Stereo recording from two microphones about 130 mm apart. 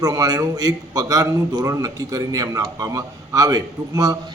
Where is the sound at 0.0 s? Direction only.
30° right (ahead or behind).